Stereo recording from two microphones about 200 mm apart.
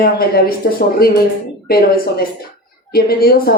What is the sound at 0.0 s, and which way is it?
Speech, 50° left (ahead or behind).